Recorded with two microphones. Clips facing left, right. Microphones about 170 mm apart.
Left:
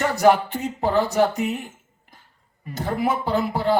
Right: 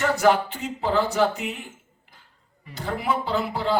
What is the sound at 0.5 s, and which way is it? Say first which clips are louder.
Speech: left 2 dB; 40° left (ahead or behind).